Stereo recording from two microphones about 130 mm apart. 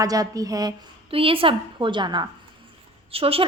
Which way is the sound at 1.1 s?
45° right (ahead or behind).